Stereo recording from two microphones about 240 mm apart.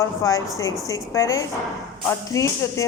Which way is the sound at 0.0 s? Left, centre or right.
Centre.